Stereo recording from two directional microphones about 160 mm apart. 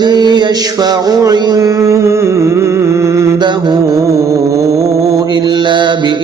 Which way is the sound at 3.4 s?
30° right (ahead or behind).